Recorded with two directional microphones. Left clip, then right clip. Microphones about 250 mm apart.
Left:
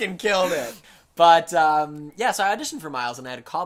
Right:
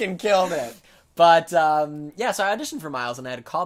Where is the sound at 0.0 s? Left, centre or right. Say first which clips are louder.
Right 1 dB; right.